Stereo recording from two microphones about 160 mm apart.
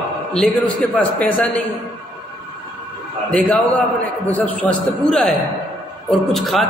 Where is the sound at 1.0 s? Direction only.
10° left (ahead or behind).